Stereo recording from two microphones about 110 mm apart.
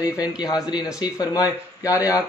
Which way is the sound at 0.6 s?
35° left (ahead or behind).